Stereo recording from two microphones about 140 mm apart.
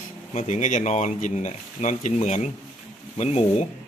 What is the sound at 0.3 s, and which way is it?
Speech, 55° left (ahead or behind).